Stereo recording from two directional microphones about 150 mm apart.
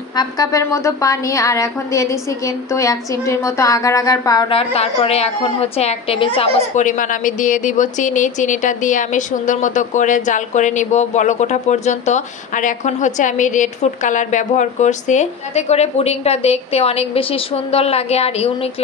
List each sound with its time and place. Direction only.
0.1 s a woman's voice: 25° left (ahead or behind)
4.5 s a woman's voice: 40° left (ahead or behind)
6.7 s a woman's voice: 55° left (ahead or behind)